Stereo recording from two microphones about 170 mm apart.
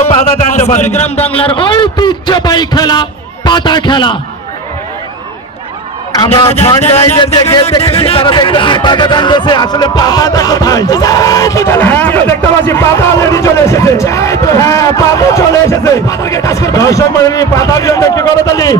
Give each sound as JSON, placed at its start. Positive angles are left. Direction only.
{"t": 0.1, "sound": "a man's voice", "side_deg": 40}
{"t": 6.1, "sound": "a man's voice", "side_deg": 25}
{"t": 6.8, "sound": "a man's voice", "side_deg": 35}